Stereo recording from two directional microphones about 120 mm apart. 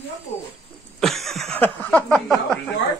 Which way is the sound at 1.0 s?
Centre (ahead or behind).